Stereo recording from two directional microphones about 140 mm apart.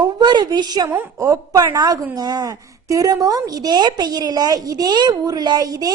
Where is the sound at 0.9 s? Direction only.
15° right (ahead or behind).